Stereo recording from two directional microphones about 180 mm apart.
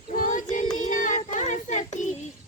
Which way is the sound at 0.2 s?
45° left (ahead or behind).